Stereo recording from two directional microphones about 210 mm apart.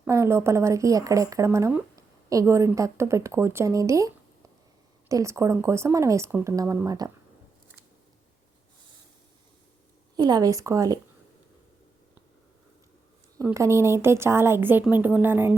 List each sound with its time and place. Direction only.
0.0 s speech: 10° right (ahead or behind)
10.2 s speech: 20° right (ahead or behind)
13.4 s speech: 15° right (ahead or behind)